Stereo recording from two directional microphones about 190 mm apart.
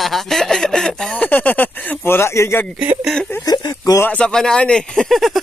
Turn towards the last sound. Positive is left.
turn(degrees=0)  # may be behind; listen again after turning